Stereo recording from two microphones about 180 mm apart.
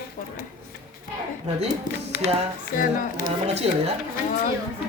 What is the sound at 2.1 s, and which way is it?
Music, 50° left (ahead or behind).